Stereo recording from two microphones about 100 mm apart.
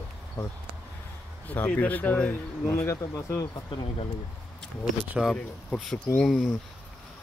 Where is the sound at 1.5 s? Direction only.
15° left (ahead or behind).